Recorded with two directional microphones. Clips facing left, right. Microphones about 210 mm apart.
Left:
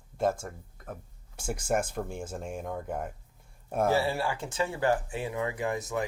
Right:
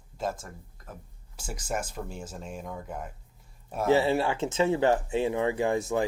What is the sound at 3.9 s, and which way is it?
Speech, 20° right (ahead or behind).